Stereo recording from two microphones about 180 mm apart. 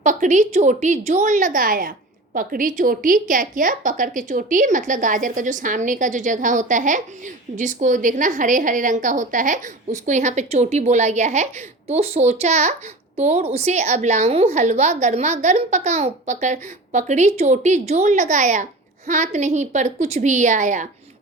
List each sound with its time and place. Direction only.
0.0 s a woman's voice: 45° right (ahead or behind)